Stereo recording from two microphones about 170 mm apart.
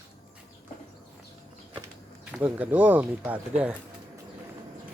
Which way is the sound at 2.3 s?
5° right (ahead or behind).